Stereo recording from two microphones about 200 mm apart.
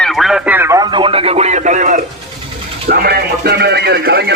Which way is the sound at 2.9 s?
50° right (ahead or behind).